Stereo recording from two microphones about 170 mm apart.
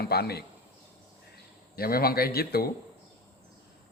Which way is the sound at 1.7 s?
60° left (ahead or behind).